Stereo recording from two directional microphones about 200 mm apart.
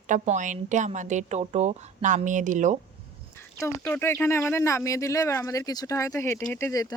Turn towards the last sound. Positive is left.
turn(degrees=15)  # may be behind; listen again after turning